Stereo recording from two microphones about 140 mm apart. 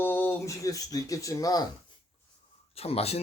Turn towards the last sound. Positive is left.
turn(degrees=45)  # may be behind; listen again after turning